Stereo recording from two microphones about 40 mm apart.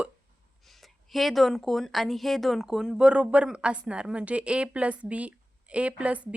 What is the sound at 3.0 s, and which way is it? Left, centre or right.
Speech, right.